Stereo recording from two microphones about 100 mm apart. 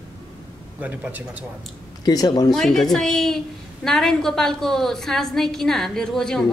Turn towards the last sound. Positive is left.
turn(degrees=5)  # may be behind; listen again after turning